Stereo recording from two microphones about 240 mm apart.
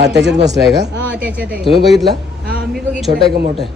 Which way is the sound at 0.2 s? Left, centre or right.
Right.